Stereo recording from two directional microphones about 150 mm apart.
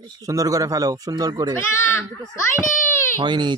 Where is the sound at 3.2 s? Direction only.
30° right (ahead or behind).